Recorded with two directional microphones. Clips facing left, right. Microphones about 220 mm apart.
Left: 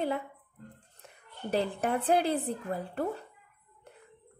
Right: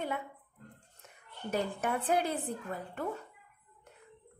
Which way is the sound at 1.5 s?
35° left (ahead or behind).